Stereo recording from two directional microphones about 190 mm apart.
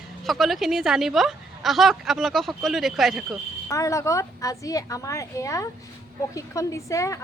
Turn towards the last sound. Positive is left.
turn(degrees=15)  # may be behind; listen again after turning